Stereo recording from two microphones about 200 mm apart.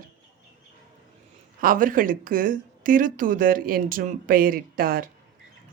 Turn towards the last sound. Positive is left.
turn(degrees=-45)  # may be behind; listen again after turning